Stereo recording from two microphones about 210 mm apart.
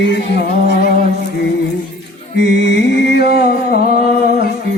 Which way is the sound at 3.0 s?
50° left (ahead or behind).